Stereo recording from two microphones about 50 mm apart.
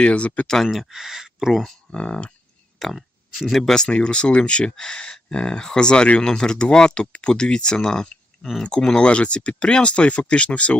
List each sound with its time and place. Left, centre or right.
0.0 s speech: left
0.4 s speech: centre
0.7 s speech: centre
1.9 s speech: left
2.7 s speech: centre
3.8 s speech: left